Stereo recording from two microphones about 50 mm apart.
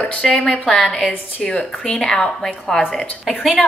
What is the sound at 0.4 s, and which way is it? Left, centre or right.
A woman's voice, left.